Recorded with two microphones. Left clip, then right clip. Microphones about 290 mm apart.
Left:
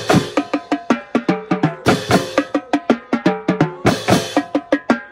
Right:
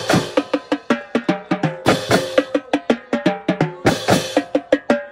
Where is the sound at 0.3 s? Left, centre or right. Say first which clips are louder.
Even; centre.